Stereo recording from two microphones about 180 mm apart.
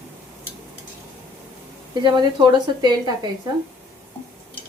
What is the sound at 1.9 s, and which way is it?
A woman's voice, 25° right (ahead or behind).